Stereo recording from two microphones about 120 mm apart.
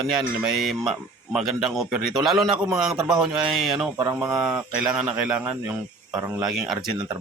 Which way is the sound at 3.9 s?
25° right (ahead or behind).